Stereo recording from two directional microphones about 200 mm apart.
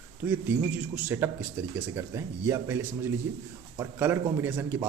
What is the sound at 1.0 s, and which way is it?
A man's voice, 10° right (ahead or behind).